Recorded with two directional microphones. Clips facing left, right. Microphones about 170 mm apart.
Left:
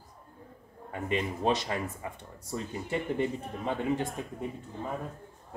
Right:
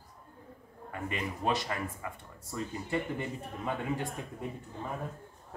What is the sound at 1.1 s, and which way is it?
Speech, 20° left (ahead or behind).